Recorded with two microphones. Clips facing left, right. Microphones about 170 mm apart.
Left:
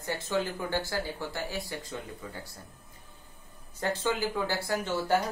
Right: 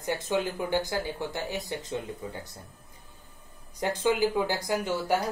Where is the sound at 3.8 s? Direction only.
15° right (ahead or behind).